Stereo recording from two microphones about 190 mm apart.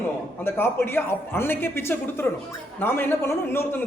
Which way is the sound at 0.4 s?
10° left (ahead or behind).